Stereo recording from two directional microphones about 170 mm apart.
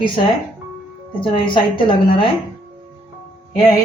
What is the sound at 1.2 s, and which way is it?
A woman's voice, 30° left (ahead or behind).